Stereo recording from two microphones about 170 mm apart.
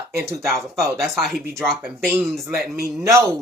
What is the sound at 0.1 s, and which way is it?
Speech, 15° right (ahead or behind).